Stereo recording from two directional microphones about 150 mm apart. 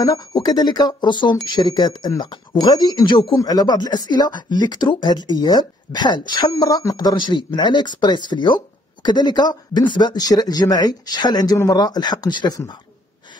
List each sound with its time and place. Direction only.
0.0 s speech: 25° left (ahead or behind)